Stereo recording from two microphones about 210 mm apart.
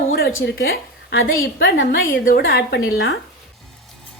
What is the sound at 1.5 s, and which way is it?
A woman's voice, 45° left (ahead or behind).